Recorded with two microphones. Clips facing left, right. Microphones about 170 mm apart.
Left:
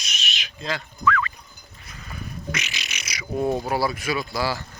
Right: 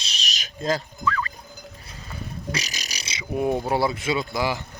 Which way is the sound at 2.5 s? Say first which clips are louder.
Right 2 dB; 35° right (ahead or behind).